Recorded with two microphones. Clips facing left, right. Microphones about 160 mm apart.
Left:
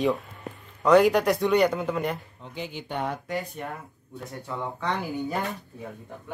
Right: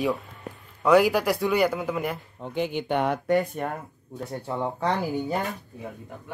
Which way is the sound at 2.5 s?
60° right (ahead or behind).